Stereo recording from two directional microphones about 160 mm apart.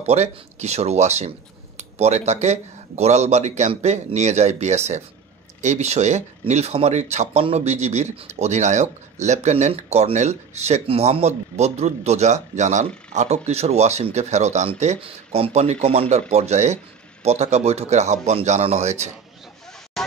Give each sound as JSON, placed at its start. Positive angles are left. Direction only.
{"t": 0.0, "sound": "speech", "side_deg": -45}